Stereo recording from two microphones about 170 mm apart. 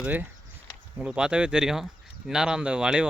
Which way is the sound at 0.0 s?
10° right (ahead or behind).